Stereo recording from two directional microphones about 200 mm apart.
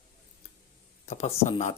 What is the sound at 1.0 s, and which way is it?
Speech, 35° left (ahead or behind).